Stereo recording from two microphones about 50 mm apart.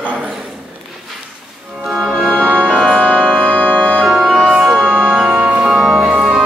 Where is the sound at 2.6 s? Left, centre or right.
Centre.